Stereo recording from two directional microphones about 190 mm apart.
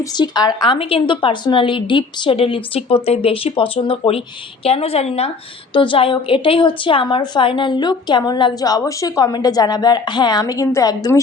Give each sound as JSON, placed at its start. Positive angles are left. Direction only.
{"t": 0.0, "sound": "a woman's voice", "side_deg": 20}